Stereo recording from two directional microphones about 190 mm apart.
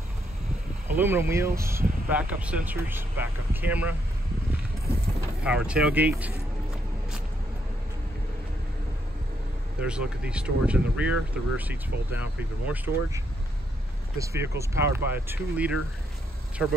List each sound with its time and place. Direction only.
0.8 s speech: 10° right (ahead or behind)
5.4 s speech: 5° right (ahead or behind)
9.8 s speech: 5° right (ahead or behind)